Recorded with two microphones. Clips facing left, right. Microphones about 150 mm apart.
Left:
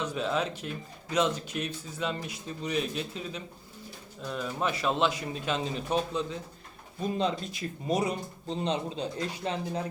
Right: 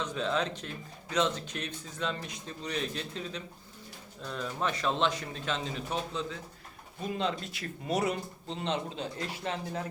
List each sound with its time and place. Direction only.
0.0 s speech: 10° left (ahead or behind)